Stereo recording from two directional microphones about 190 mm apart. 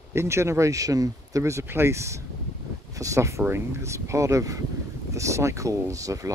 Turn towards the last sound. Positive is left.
turn(degrees=-15)  # may be behind; listen again after turning